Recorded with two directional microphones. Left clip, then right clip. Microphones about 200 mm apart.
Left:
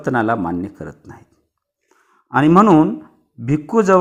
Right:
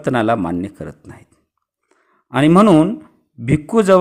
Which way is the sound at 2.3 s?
35° right (ahead or behind).